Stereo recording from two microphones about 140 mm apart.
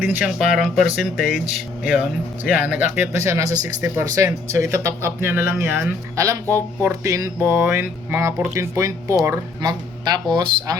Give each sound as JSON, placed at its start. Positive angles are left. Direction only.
{"t": 0.0, "sound": "speech", "side_deg": -10}